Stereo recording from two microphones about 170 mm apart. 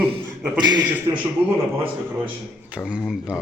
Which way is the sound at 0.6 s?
25° right (ahead or behind).